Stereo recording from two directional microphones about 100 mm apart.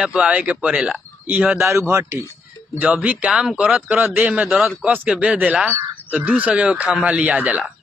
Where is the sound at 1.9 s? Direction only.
25° right (ahead or behind); by 3.8 s 5° right (ahead or behind).